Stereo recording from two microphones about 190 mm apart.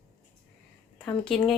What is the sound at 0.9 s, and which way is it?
Speech, 5° left (ahead or behind).